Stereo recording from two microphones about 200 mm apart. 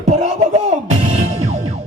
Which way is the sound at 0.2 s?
35° right (ahead or behind).